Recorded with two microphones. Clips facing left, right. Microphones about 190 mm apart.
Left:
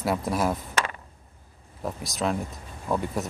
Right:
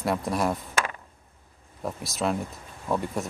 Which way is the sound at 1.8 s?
Centre (ahead or behind).